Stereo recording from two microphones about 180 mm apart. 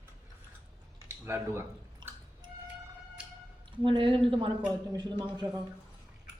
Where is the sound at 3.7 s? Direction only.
30° right (ahead or behind).